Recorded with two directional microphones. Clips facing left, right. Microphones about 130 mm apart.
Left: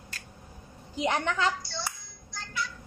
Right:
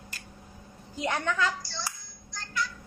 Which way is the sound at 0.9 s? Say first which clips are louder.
Left 1 dB; 20° left (ahead or behind).